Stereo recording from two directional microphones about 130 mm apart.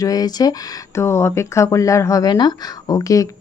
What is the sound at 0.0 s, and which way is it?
Speech, 30° left (ahead or behind).